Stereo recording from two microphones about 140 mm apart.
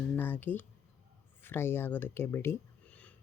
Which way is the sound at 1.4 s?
15° left (ahead or behind).